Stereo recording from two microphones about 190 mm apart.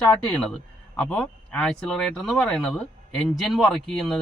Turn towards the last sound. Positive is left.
turn(degrees=0)  # may be behind; listen again after turning